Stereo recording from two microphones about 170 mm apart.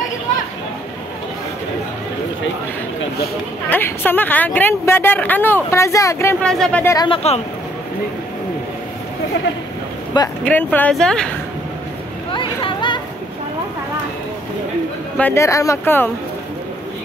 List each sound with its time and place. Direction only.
3.7 s speech: 10° left (ahead or behind)
6.4 s speech: 5° left (ahead or behind)
7.1 s speech: 40° left (ahead or behind)
10.4 s speech: 10° left (ahead or behind)
12.3 s vehicle: 30° left (ahead or behind)
15.1 s speech: 15° left (ahead or behind)